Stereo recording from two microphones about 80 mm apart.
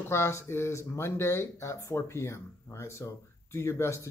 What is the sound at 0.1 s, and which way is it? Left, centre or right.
A man's voice, left.